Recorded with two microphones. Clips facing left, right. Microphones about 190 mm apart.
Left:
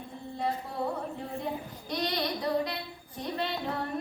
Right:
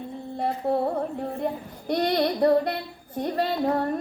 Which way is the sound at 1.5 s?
55° right (ahead or behind).